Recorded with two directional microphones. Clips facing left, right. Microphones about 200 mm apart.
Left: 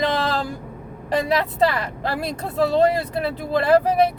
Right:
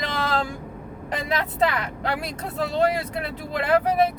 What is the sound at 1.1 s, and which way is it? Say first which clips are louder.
A woman's voice: left 5 dB; 35° left (ahead or behind).